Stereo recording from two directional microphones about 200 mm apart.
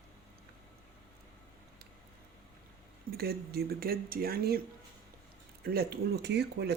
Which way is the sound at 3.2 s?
50° right (ahead or behind).